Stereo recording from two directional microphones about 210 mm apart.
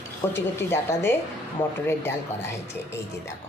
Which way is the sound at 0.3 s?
10° left (ahead or behind).